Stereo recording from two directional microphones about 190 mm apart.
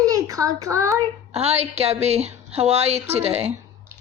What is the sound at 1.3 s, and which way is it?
A woman's voice, 35° right (ahead or behind).